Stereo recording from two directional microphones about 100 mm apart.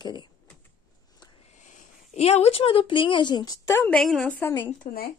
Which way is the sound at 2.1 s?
90° left.